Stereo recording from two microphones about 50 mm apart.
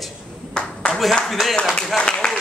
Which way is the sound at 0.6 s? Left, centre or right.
Centre.